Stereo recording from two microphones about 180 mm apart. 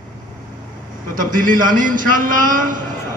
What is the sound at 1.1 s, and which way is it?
Speech, 50° right (ahead or behind).